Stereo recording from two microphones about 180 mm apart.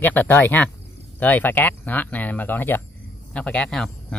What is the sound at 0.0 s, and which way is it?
Speech, 10° left (ahead or behind).